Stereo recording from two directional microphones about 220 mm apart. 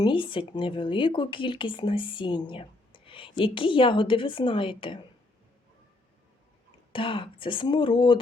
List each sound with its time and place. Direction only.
0.0 s speech: 25° left (ahead or behind)
6.9 s speech: 25° left (ahead or behind)